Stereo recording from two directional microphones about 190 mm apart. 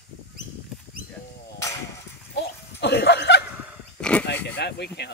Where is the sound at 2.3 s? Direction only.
60° left (ahead or behind).